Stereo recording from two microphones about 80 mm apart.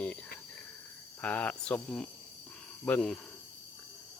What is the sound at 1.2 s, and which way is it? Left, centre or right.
Speech, centre.